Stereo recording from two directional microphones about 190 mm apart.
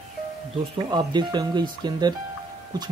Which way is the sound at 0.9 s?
20° right (ahead or behind).